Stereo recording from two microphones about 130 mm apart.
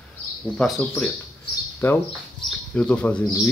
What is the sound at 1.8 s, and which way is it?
Speech, 15° left (ahead or behind).